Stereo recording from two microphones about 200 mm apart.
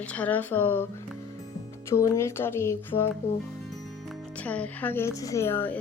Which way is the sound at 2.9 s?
30° left (ahead or behind).